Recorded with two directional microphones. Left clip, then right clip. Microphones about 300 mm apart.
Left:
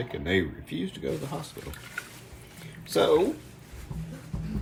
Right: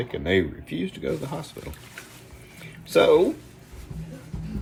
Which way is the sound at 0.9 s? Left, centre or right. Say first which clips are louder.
Right 3 dB; centre.